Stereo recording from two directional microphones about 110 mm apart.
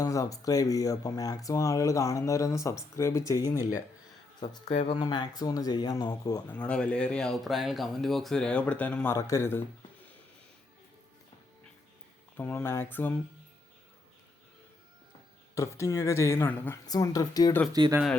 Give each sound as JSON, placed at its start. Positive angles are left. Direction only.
{"t": 0.0, "sound": "speech", "side_deg": 30}
{"t": 4.9, "sound": "speech", "side_deg": 40}
{"t": 6.5, "sound": "speech", "side_deg": 10}
{"t": 9.0, "sound": "speech", "side_deg": 25}
{"t": 12.4, "sound": "speech", "side_deg": 10}
{"t": 15.5, "sound": "speech", "side_deg": 25}
{"t": 16.8, "sound": "speech", "side_deg": 35}
{"t": 17.7, "sound": "speech", "side_deg": -40}